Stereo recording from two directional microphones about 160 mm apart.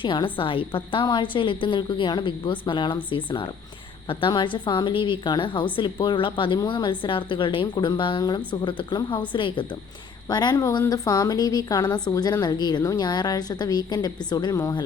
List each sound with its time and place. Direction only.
0.0 s a woman's voice: 30° left (ahead or behind)